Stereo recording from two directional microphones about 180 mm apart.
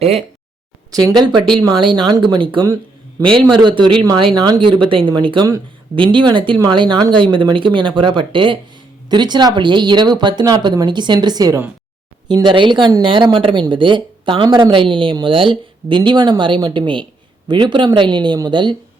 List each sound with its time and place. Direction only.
0.0 s speech: 35° right (ahead or behind)
0.9 s a woman's voice: 20° right (ahead or behind)